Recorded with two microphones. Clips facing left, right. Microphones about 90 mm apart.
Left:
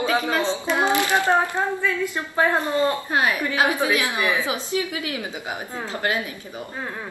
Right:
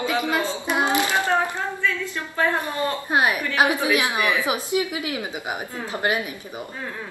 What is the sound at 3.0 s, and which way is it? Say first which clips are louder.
A woman's voice: right 1 dB; 20° right (ahead or behind).